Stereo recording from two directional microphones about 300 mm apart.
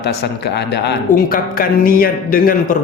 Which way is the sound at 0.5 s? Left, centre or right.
Left.